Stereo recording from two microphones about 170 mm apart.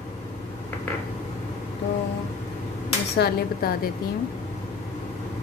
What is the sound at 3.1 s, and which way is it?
Speech, 65° left (ahead or behind).